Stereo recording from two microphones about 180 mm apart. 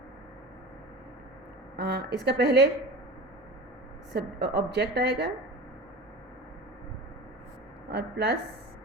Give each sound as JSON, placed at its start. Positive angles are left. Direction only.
{"t": 1.7, "sound": "a woman's voice", "side_deg": -65}
{"t": 4.1, "sound": "a woman's voice", "side_deg": -70}
{"t": 7.9, "sound": "a woman's voice", "side_deg": -65}